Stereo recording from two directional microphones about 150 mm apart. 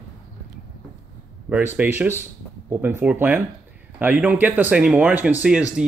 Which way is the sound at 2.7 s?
15° right (ahead or behind).